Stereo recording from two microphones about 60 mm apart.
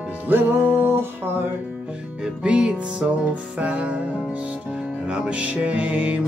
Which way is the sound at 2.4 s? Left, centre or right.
Centre.